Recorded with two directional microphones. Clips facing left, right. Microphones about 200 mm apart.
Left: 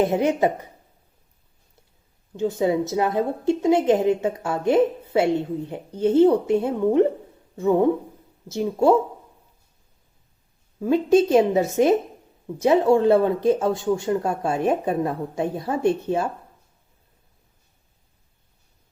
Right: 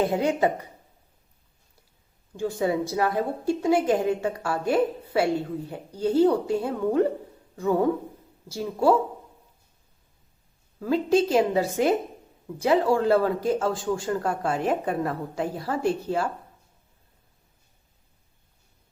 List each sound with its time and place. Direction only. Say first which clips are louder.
0.0 s a woman's voice: left 3 dB; 20° left (ahead or behind)
2.3 s a woman's voice: left 4 dB; 20° left (ahead or behind)
10.8 s a woman's voice: left 4 dB; 20° left (ahead or behind)